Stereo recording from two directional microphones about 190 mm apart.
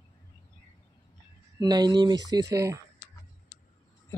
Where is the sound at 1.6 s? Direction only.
20° right (ahead or behind).